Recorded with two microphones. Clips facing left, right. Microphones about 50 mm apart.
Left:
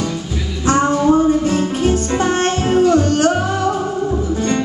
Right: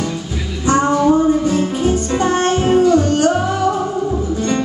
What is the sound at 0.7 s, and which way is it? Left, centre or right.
Music, centre.